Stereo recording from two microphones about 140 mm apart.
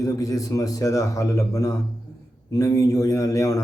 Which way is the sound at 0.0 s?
25° left (ahead or behind).